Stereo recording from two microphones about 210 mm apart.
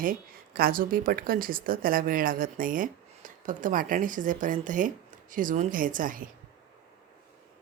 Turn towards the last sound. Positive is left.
turn(degrees=-40)  # may be behind; listen again after turning